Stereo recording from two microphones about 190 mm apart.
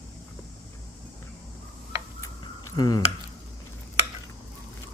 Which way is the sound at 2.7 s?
20° left (ahead or behind).